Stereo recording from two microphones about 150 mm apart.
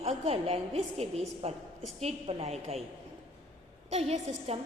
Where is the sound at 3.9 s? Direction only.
45° right (ahead or behind).